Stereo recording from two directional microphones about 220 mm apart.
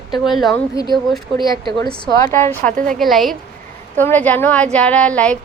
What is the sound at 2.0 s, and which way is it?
A woman's voice, 20° left (ahead or behind).